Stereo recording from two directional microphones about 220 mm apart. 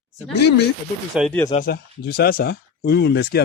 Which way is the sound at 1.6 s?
45° left (ahead or behind).